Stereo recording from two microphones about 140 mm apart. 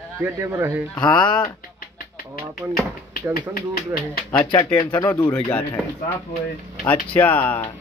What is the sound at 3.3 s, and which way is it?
Speech, 90° left.